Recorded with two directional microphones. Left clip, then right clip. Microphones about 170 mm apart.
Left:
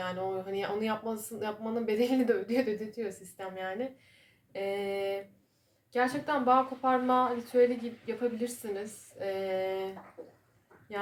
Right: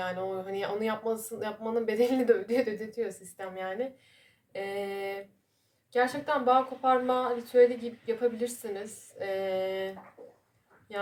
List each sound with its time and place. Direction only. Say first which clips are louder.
0.0 s speech: right 1 dB; 30° right (ahead or behind)